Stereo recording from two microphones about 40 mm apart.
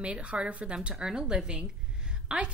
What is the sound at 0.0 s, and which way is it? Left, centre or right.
Speech, right.